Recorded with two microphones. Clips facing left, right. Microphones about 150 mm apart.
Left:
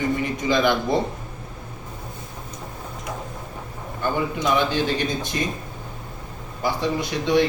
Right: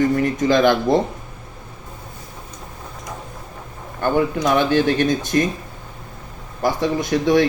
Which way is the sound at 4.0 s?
55° right (ahead or behind).